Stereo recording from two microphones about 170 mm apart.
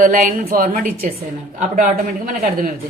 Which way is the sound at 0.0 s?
55° right (ahead or behind).